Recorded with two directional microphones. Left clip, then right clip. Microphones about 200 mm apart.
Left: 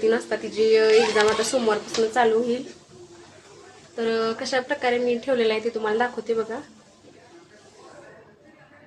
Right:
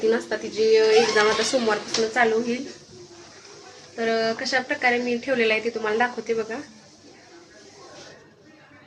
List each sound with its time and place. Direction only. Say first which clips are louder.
0.1 s a woman's voice: even; 15° left (ahead or behind)
3.9 s a woman's voice: right 1 dB; 15° left (ahead or behind)